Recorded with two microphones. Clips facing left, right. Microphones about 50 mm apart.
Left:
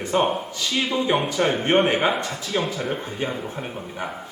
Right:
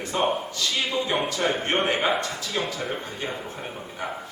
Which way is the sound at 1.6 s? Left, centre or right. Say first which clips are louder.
Left 5 dB; centre.